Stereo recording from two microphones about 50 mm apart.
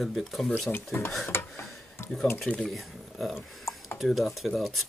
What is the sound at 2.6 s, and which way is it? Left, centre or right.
Speech, centre.